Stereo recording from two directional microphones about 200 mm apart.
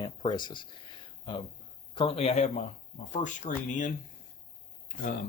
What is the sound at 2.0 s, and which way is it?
Speech, 30° left (ahead or behind).